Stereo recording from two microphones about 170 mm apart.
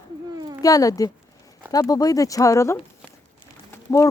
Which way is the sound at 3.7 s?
15° left (ahead or behind).